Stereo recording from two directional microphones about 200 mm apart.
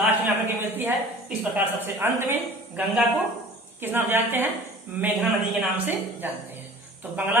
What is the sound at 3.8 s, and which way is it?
A man's voice, 10° right (ahead or behind).